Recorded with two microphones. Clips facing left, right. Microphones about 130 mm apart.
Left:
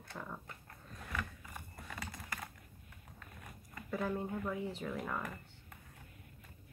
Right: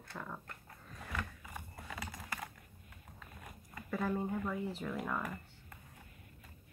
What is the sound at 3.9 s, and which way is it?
Speech, centre (ahead or behind).